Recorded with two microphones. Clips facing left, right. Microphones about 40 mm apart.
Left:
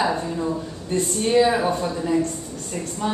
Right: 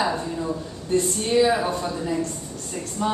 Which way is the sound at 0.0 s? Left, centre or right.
Centre.